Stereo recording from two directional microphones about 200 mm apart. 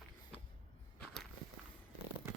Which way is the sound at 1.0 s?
Centre (ahead or behind).